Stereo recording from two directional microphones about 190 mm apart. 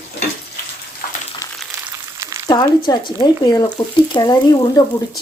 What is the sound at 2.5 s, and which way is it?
A woman's voice, 20° left (ahead or behind).